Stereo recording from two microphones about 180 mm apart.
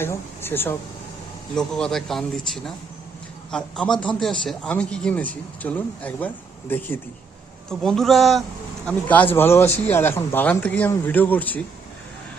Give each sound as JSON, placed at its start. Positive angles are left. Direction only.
{"t": 0.0, "sound": "a man's voice", "side_deg": 10}